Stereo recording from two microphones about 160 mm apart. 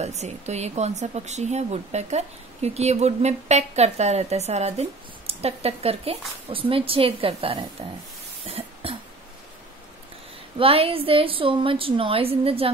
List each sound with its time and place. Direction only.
0.0 s speech: 45° right (ahead or behind)
8.5 s cough: 35° right (ahead or behind)
10.6 s a woman's voice: 35° right (ahead or behind)